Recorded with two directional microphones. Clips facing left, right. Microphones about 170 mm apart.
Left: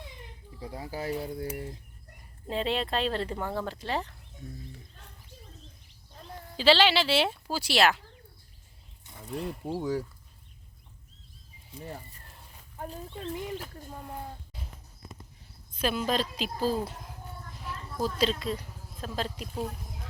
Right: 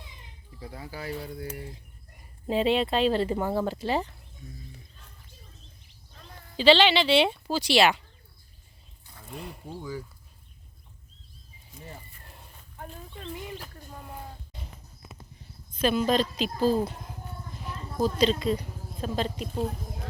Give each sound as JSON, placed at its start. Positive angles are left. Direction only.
{"t": 0.6, "sound": "speech", "side_deg": 30}
{"t": 1.1, "sound": "speech", "side_deg": 25}
{"t": 2.5, "sound": "speech", "side_deg": -5}
{"t": 6.6, "sound": "speech", "side_deg": 5}
{"t": 9.6, "sound": "speech", "side_deg": 80}
{"t": 11.7, "sound": "speech", "side_deg": 35}
{"t": 14.5, "sound": "a sound", "side_deg": 0}
{"t": 15.8, "sound": "speech", "side_deg": 5}
{"t": 18.0, "sound": "speech", "side_deg": 5}